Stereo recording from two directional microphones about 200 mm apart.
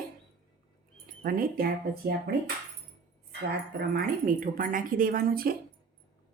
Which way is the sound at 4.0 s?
45° right (ahead or behind).